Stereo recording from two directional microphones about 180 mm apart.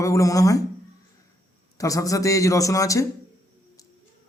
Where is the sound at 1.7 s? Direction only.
20° left (ahead or behind).